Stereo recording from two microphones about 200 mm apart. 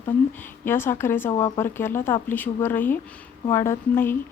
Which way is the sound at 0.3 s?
10° left (ahead or behind).